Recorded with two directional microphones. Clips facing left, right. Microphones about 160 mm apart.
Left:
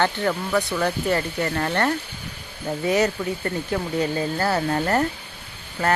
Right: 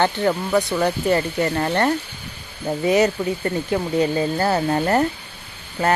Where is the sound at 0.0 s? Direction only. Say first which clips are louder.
Right 3 dB; 20° right (ahead or behind).